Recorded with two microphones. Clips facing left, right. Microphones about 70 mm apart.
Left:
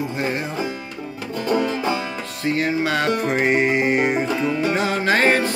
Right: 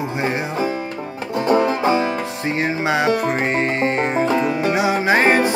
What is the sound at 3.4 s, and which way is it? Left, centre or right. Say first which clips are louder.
Music: left 1 dB; centre.